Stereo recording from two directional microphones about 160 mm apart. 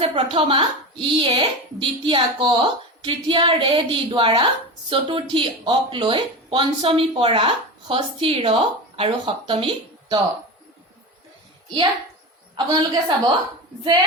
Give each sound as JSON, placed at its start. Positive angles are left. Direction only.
{"t": 0.0, "sound": "speech", "side_deg": -35}
{"t": 12.5, "sound": "a woman's voice", "side_deg": -30}